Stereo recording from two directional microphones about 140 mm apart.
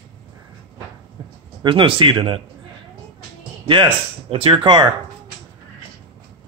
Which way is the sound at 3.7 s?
40° right (ahead or behind).